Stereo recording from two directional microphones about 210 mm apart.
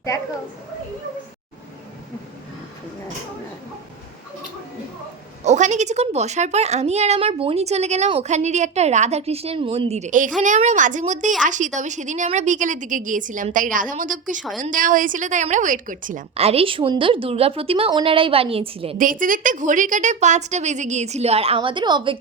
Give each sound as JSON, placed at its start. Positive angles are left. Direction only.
{"t": 5.5, "sound": "a woman's voice", "side_deg": -35}
{"t": 18.9, "sound": "a woman's voice", "side_deg": -40}